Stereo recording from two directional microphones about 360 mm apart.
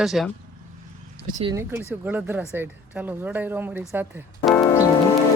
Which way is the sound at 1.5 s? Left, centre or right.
Centre.